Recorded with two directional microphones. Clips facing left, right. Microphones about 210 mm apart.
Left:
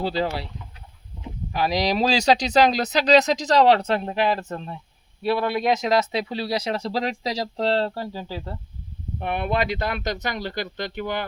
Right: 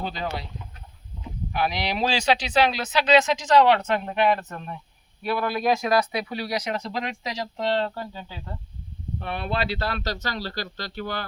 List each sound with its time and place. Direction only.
0.0 s speech: 30° left (ahead or behind)
1.5 s speech: 35° left (ahead or behind)
9.2 s speech: 15° left (ahead or behind)